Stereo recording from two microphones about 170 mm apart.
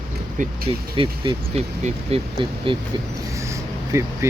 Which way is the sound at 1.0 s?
30° right (ahead or behind).